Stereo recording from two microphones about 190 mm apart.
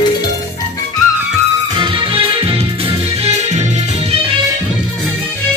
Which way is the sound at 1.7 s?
25° right (ahead or behind).